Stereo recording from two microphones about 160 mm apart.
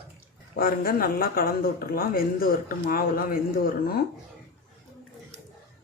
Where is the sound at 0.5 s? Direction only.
65° left (ahead or behind).